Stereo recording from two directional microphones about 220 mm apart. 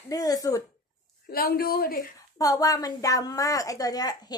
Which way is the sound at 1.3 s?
45° left (ahead or behind).